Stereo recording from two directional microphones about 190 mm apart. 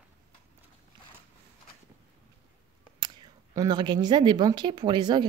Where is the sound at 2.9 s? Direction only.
20° right (ahead or behind).